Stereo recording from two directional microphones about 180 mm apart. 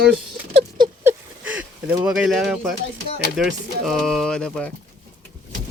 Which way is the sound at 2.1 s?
5° right (ahead or behind).